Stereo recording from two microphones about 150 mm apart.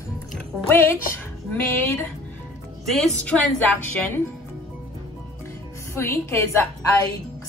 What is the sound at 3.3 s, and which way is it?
Speech, centre (ahead or behind).